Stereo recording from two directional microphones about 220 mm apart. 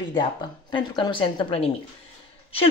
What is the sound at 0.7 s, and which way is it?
A woman's voice, 20° left (ahead or behind).